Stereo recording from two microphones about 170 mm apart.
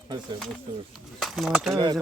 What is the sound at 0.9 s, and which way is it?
Speech, centre (ahead or behind).